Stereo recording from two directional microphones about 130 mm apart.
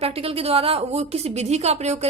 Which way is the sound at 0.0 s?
50° right (ahead or behind).